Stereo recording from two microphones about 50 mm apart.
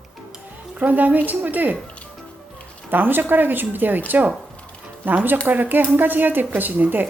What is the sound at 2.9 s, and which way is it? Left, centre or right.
Speech, right.